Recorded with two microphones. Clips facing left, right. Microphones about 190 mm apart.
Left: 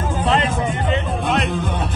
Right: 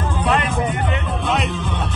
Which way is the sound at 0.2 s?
25° left (ahead or behind).